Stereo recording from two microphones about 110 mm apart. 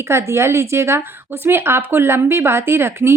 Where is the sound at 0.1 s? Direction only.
25° right (ahead or behind).